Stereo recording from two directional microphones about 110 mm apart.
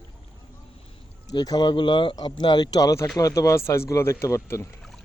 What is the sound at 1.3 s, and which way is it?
Speech, 35° left (ahead or behind).